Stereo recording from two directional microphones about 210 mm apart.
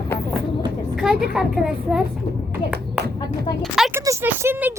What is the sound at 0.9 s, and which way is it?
A woman's voice, centre (ahead or behind).